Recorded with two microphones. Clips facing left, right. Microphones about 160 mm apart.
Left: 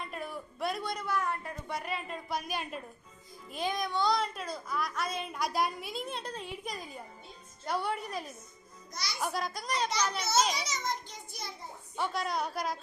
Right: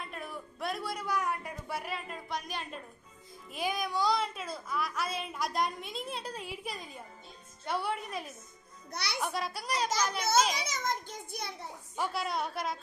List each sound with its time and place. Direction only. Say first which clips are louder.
0.0 s a child's voice: left 2 dB; centre (ahead or behind)
3.5 s a child's voice: even; 5° right (ahead or behind)
8.9 s a child's voice: right 2 dB; 65° right (ahead or behind)
9.2 s a child's voice: left 3 dB; centre (ahead or behind)
10.2 s a child's voice: right 2 dB; 50° right (ahead or behind)
11.9 s a child's voice: left 1 dB; 5° right (ahead or behind)